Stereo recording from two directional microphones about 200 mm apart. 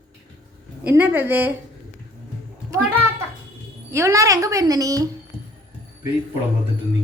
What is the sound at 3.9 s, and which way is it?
Speech, 15° right (ahead or behind).